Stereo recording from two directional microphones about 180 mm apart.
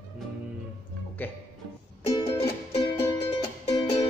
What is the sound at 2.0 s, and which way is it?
Music, 30° left (ahead or behind).